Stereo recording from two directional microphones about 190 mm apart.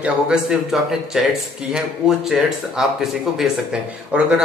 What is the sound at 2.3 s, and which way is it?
Speech, centre (ahead or behind).